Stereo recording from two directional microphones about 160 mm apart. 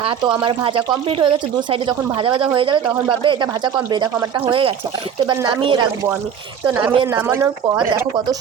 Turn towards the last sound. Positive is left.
turn(degrees=-15)  # may be behind; listen again after turning